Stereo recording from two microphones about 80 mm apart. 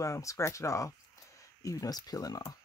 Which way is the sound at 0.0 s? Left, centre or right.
Left.